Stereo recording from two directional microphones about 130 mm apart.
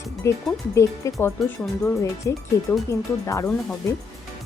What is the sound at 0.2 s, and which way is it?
Speech, 20° left (ahead or behind).